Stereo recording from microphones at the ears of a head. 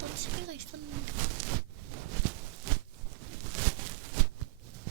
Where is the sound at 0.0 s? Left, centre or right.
Right.